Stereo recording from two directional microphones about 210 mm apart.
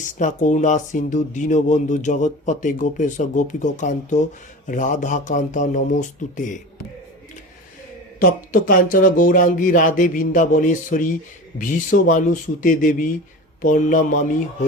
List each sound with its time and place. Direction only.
0.0 s speech: 35° left (ahead or behind)
8.2 s speech: 40° left (ahead or behind)